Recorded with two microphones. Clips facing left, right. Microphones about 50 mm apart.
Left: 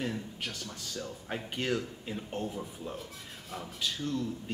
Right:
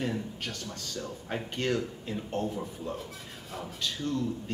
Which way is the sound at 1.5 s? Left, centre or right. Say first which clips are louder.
Right 2 dB; centre.